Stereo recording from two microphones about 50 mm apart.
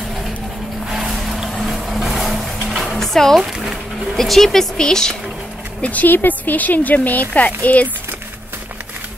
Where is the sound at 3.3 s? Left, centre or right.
Centre.